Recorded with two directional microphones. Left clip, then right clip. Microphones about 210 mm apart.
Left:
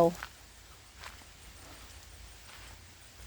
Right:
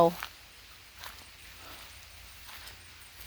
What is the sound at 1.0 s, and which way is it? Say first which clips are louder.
Horse: right 2 dB; 50° right (ahead or behind).